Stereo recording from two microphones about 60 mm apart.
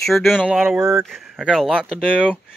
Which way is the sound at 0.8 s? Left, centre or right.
Right.